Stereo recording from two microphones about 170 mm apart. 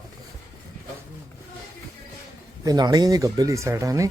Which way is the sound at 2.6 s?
20° right (ahead or behind).